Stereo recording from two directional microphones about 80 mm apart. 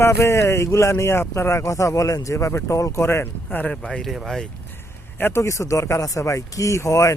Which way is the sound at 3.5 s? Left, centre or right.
Left.